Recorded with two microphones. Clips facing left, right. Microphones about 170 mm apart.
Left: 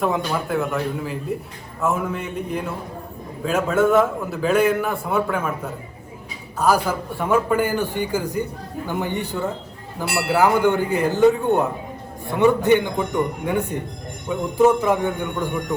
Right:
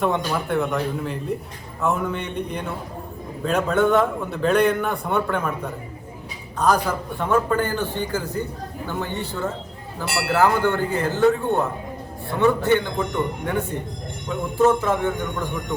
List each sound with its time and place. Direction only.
0.0 s a man's voice: centre (ahead or behind)